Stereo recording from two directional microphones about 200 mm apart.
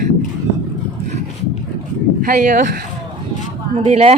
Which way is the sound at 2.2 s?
40° right (ahead or behind).